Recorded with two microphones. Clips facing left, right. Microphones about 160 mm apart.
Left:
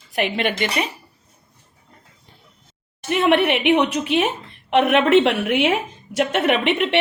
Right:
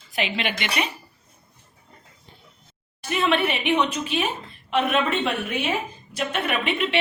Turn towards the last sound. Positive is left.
turn(degrees=70)  # may be behind; listen again after turning